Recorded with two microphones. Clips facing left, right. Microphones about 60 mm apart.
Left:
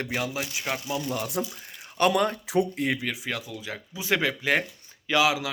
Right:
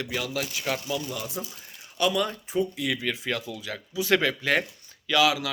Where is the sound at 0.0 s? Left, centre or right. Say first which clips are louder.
Left 2 dB; left.